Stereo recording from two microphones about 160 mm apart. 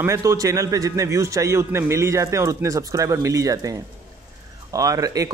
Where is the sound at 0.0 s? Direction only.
20° right (ahead or behind).